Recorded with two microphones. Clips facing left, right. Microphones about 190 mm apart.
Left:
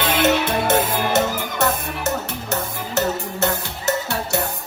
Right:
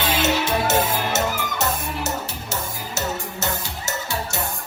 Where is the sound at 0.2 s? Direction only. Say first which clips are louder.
Left 4 dB; 55° left (ahead or behind).